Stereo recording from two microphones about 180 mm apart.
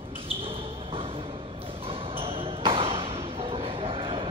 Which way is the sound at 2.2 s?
30° right (ahead or behind).